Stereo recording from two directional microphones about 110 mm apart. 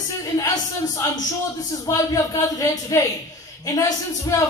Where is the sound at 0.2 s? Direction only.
35° left (ahead or behind).